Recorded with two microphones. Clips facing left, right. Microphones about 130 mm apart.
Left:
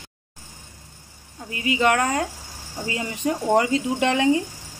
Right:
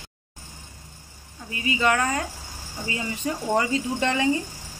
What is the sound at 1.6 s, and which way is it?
Speech, 70° left (ahead or behind).